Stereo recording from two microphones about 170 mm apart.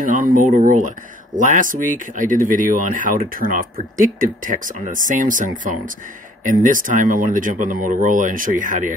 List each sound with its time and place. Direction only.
0.0 s speech: 55° right (ahead or behind)